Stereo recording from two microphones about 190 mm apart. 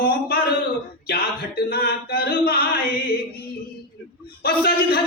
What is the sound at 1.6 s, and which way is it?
Mantra, 55° left (ahead or behind).